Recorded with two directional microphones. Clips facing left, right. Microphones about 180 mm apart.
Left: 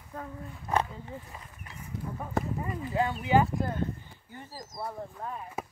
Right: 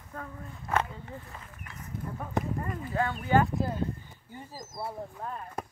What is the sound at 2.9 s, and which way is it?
Speech, 15° left (ahead or behind).